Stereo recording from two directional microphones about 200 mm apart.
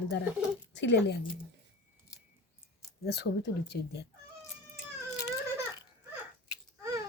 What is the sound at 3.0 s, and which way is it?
Speech, 55° left (ahead or behind).